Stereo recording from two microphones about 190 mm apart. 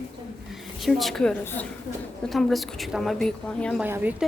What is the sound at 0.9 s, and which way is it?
A woman's voice, centre (ahead or behind).